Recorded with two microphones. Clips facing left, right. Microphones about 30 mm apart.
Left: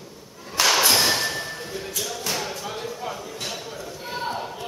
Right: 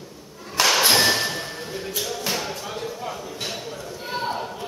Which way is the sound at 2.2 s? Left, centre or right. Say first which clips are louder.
Right 1 dB; centre.